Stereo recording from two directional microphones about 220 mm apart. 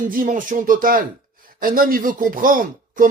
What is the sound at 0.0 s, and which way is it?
Speech, 35° right (ahead or behind).